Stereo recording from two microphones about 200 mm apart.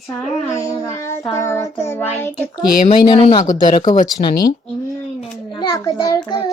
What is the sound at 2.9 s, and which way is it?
Speech, 25° left (ahead or behind).